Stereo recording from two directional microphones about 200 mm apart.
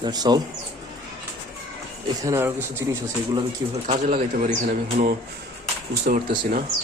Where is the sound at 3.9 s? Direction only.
35° right (ahead or behind).